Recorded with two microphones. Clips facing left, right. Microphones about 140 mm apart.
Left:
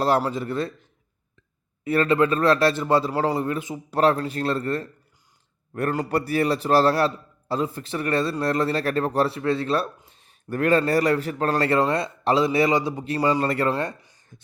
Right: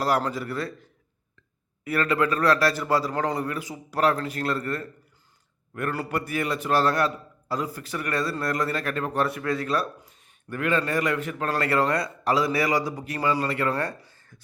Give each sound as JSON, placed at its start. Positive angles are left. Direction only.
{"t": 0.3, "sound": "a man's voice", "side_deg": 25}
{"t": 6.1, "sound": "a man's voice", "side_deg": 35}
{"t": 13.7, "sound": "speech", "side_deg": 20}